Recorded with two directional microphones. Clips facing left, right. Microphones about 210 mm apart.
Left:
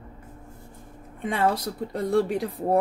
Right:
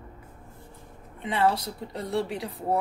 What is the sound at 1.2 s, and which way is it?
Speech, 50° left (ahead or behind).